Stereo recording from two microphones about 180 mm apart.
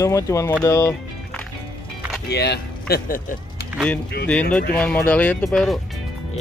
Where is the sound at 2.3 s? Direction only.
65° left (ahead or behind).